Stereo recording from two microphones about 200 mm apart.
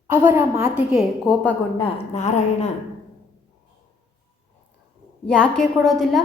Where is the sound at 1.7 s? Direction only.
30° left (ahead or behind).